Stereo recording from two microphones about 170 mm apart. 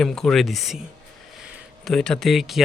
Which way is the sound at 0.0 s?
5° left (ahead or behind).